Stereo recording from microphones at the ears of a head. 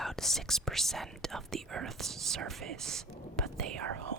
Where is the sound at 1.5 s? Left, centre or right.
Right.